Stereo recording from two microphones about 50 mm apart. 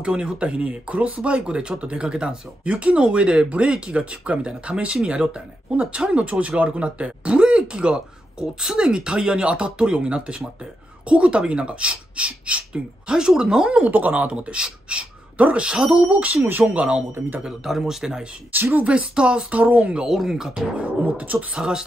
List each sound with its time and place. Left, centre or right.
0.0 s speech: right
13.7 s speech: right
14.3 s speech: centre
16.0 s speech: right
16.3 s speech: right
16.6 s speech: right
17.6 s speech: centre
18.5 s speech: right
18.9 s speech: right
19.6 s speech: right
20.1 s speech: centre
21.0 s speech: right
21.5 s speech: centre